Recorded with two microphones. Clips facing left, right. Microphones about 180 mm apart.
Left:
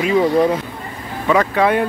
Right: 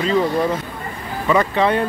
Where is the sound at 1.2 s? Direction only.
5° left (ahead or behind).